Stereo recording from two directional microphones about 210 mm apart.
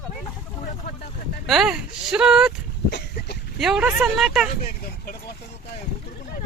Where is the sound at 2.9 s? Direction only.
55° left (ahead or behind).